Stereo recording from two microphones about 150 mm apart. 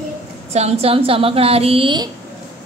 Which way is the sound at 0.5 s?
45° right (ahead or behind).